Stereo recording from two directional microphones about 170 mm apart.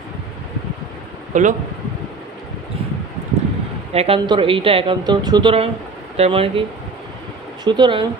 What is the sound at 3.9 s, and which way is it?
Speech, 35° right (ahead or behind).